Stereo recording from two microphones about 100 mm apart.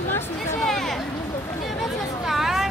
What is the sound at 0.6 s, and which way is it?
Speech, 5° left (ahead or behind).